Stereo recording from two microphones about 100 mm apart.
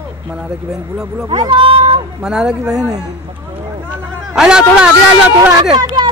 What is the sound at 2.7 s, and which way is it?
Speech, 35° right (ahead or behind).